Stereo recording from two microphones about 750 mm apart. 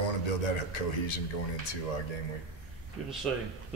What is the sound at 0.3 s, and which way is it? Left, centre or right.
A man's voice, left.